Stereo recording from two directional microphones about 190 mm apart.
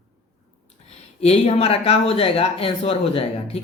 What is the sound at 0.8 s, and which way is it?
Speech, 35° left (ahead or behind).